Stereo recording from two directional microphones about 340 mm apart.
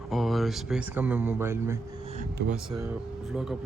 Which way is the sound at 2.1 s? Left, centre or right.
Centre.